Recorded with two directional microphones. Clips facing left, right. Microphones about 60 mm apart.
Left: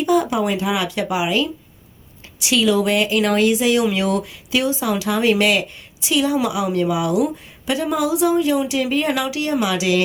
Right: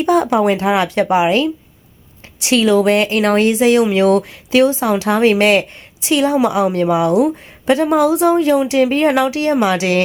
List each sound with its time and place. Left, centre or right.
0.0 s speech: right